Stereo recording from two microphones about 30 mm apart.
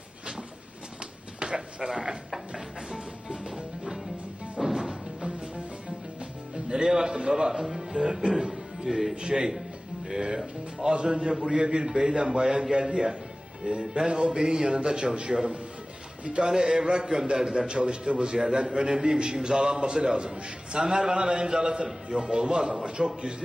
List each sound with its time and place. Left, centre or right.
1.4 s a man's voice: right
4.8 s music: right
6.7 s a man's voice: right
7.5 s speech: centre
8.0 s a man's voice: right
8.3 s music: right
8.9 s speech: centre
9.2 s a man's voice: right